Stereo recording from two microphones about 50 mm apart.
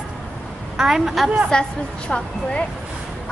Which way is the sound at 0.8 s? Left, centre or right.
Centre.